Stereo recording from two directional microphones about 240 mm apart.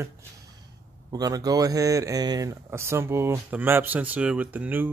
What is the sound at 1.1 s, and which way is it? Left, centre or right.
Speech, centre.